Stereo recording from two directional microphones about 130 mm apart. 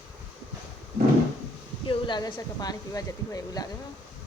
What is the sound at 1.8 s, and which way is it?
A woman's voice, 35° left (ahead or behind).